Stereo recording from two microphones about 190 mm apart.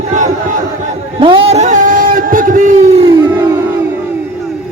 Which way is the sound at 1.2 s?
30° right (ahead or behind).